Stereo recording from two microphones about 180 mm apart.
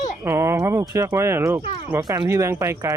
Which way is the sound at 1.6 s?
30° left (ahead or behind).